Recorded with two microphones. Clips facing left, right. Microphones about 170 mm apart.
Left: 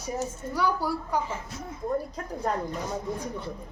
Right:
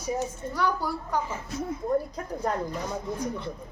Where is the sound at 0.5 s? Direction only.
10° left (ahead or behind).